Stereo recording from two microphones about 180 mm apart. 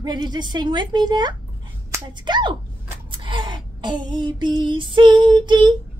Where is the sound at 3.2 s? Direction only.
25° right (ahead or behind).